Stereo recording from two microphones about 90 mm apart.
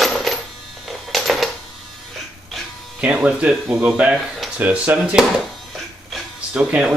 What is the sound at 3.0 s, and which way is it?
Speech, 15° right (ahead or behind).